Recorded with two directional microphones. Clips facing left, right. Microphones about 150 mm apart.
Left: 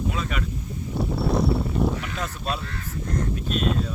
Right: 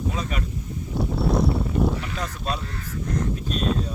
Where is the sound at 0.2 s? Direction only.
35° right (ahead or behind).